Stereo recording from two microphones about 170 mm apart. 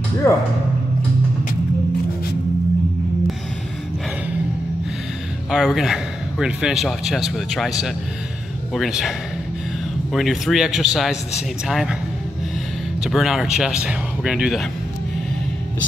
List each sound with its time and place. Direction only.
0.2 s speech: 15° left (ahead or behind)
5.5 s a man's voice: centre (ahead or behind)
10.1 s a man's voice: centre (ahead or behind)
13.0 s a man's voice: centre (ahead or behind)